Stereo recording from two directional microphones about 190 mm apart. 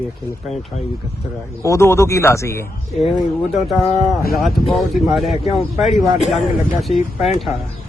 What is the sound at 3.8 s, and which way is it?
Speech, 35° left (ahead or behind).